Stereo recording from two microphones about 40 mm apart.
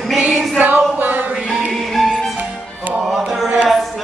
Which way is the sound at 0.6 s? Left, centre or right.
Right.